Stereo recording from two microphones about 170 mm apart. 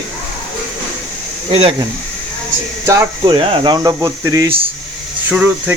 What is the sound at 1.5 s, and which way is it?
Speech, 30° right (ahead or behind).